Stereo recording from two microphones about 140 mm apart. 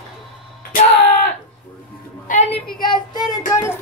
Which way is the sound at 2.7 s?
30° left (ahead or behind).